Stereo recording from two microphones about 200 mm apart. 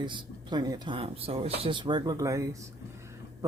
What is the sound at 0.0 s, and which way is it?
Speech, 20° right (ahead or behind).